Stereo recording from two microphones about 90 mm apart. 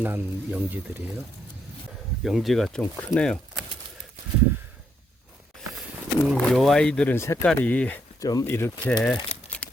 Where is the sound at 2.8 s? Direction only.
20° left (ahead or behind).